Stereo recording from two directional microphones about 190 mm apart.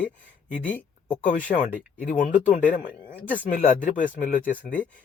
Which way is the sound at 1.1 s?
40° left (ahead or behind).